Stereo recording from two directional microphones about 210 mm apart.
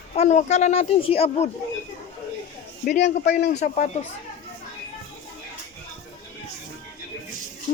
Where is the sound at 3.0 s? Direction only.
55° left (ahead or behind).